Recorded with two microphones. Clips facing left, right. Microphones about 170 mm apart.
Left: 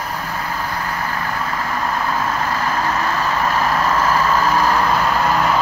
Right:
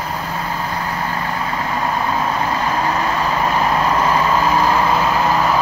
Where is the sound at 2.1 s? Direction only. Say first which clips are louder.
Right 2 dB; 20° right (ahead or behind); by 5.5 s centre (ahead or behind).